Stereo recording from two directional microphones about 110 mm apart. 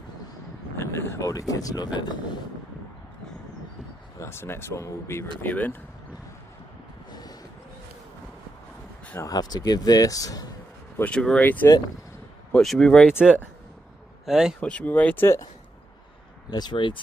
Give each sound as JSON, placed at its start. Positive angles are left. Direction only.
{"t": 0.7, "sound": "speech", "side_deg": 20}
{"t": 4.2, "sound": "speech", "side_deg": 20}
{"t": 7.1, "sound": "a sound", "side_deg": 40}
{"t": 9.2, "sound": "speech", "side_deg": 35}
{"t": 11.1, "sound": "speech", "side_deg": 10}
{"t": 12.5, "sound": "speech", "side_deg": 5}
{"t": 13.2, "sound": "a man's voice", "side_deg": -10}
{"t": 14.6, "sound": "speech", "side_deg": 10}
{"t": 16.4, "sound": "speech", "side_deg": 40}